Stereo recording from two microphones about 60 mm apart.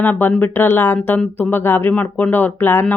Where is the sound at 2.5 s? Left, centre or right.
Left.